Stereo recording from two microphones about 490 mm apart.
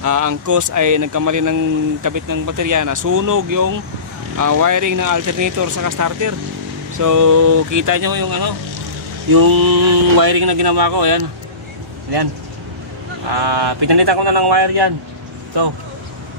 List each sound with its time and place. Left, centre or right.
0.0 s speech: right
13.3 s speech: right